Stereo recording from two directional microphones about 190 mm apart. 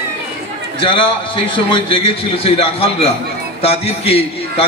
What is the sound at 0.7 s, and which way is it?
A man's voice, 25° left (ahead or behind).